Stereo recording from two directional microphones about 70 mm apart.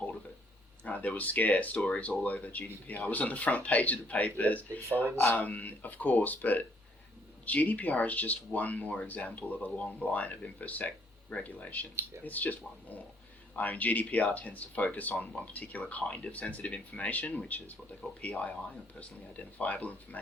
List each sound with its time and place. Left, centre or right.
0.9 s speech: left